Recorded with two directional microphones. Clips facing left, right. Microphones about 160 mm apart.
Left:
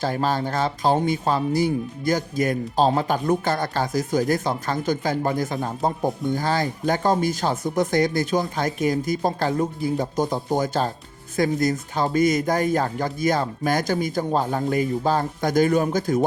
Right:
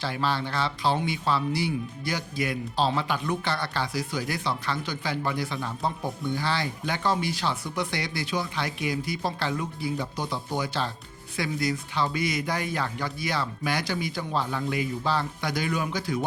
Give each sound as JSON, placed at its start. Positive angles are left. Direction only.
{"t": 0.0, "sound": "speech", "side_deg": 45}